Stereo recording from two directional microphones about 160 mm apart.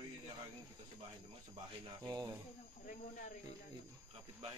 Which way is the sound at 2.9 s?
55° left (ahead or behind).